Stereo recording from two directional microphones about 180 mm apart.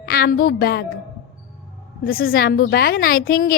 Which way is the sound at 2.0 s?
55° left (ahead or behind).